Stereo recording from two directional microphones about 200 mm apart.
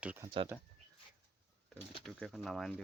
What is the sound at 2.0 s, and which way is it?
Speech, centre (ahead or behind).